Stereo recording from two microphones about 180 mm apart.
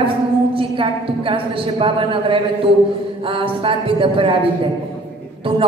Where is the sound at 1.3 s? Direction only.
30° right (ahead or behind).